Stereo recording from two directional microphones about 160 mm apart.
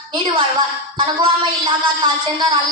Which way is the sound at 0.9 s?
30° right (ahead or behind).